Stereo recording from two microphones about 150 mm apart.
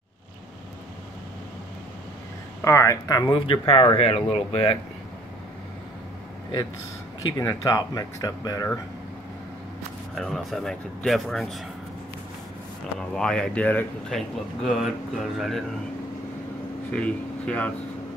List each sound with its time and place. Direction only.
2.6 s speech: 20° left (ahead or behind); by 4.7 s 40° left (ahead or behind)
7.2 s speech: 25° left (ahead or behind)
10.1 s speech: centre (ahead or behind)
13.1 s speech: 5° left (ahead or behind)
14.6 s speech: centre (ahead or behind)
16.9 s speech: 10° left (ahead or behind)